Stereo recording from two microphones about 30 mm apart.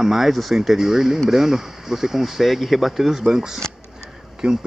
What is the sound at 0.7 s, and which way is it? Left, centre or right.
Speech, centre.